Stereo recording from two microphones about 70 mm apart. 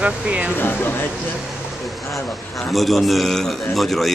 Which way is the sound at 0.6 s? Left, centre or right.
Left.